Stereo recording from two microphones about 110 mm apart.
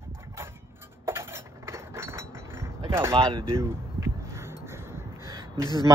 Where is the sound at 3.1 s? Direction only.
50° right (ahead or behind).